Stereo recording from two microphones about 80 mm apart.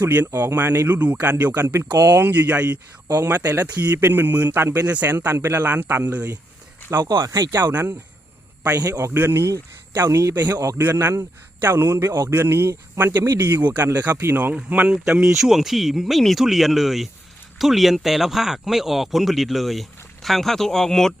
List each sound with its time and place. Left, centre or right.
0.0 s speech: right
7.2 s speech: right
7.7 s speech: right
8.7 s speech: right
9.1 s a man's voice: right
14.5 s speech: centre